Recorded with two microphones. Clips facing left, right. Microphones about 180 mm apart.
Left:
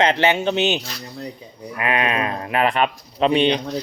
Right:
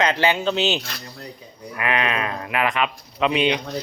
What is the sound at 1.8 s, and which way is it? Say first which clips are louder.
Speech: left 2 dB; 25° left (ahead or behind).